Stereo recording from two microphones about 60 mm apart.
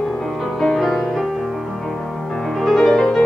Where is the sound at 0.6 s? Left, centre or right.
Centre.